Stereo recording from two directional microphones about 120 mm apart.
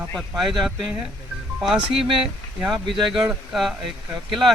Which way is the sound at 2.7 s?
40° right (ahead or behind).